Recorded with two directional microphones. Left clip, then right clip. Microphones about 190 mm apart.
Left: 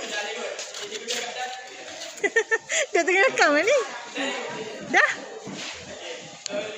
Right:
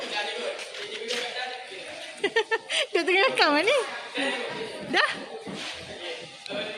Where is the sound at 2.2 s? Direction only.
Centre (ahead or behind).